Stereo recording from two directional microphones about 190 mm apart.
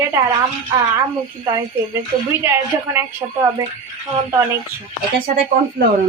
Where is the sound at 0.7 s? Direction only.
20° right (ahead or behind).